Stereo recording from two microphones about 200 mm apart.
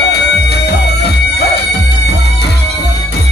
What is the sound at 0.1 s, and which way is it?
Music, 55° left (ahead or behind).